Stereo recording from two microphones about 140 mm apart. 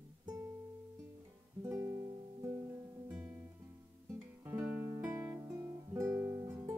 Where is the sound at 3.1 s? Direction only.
10° right (ahead or behind).